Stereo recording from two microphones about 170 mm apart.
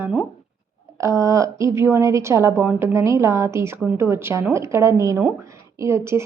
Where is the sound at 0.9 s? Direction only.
15° right (ahead or behind).